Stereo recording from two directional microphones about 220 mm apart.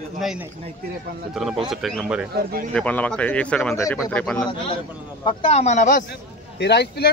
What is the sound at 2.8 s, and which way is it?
A man's voice, 5° left (ahead or behind).